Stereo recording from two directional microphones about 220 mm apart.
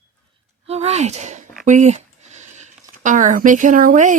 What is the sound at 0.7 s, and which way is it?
Speech, 30° right (ahead or behind).